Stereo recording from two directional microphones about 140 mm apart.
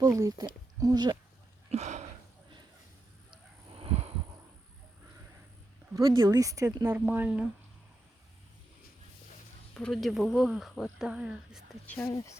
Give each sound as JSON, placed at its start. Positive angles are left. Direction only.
{"t": 0.0, "sound": "speech", "side_deg": -25}
{"t": 1.7, "sound": "a sound", "side_deg": -55}
{"t": 3.8, "sound": "a sound", "side_deg": -45}
{"t": 5.9, "sound": "speech", "side_deg": -25}
{"t": 6.9, "sound": "speech", "side_deg": -15}
{"t": 9.7, "sound": "speech", "side_deg": 5}
{"t": 11.9, "sound": "speech", "side_deg": 15}